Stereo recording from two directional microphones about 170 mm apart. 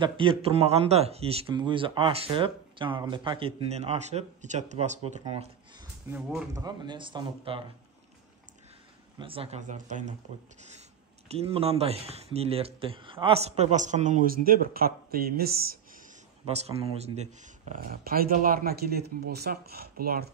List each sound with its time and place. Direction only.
0.0 s speech: 30° right (ahead or behind)
6.0 s speech: 5° right (ahead or behind)
6.5 s speech: 25° right (ahead or behind)
9.2 s speech: 35° right (ahead or behind)
11.2 s speech: 35° right (ahead or behind); by 15.8 s 60° right (ahead or behind)
16.4 s speech: 35° right (ahead or behind)
17.6 s speech: 60° right (ahead or behind)